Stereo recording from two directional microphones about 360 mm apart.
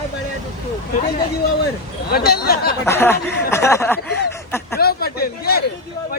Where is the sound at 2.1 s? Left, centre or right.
Left.